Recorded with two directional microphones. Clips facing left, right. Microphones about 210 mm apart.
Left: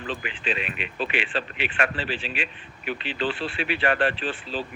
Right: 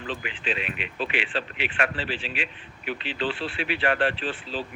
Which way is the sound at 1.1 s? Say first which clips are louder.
Left 1 dB; 45° left (ahead or behind).